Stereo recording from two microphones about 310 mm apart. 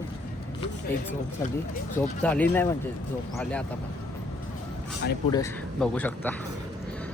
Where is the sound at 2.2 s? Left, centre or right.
Centre.